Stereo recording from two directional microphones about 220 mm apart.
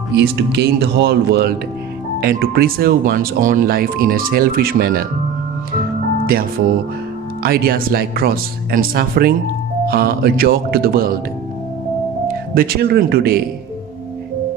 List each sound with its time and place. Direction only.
0.1 s speech: 50° right (ahead or behind)
7.4 s speech: 45° right (ahead or behind)
12.3 s speech: 40° right (ahead or behind)